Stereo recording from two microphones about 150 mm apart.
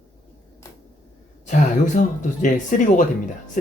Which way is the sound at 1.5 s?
55° left (ahead or behind).